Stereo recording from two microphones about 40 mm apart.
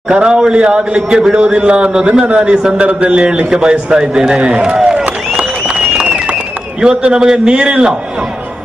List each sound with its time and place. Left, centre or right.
0.1 s a man's voice: centre
7.0 s a man's voice: right